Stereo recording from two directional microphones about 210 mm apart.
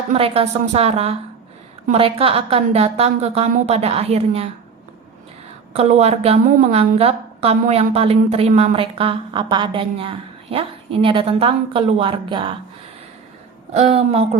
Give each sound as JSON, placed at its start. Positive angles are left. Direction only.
{"t": 0.1, "sound": "a woman's voice", "side_deg": -25}
{"t": 5.7, "sound": "a woman's voice", "side_deg": -30}
{"t": 13.7, "sound": "speech", "side_deg": -30}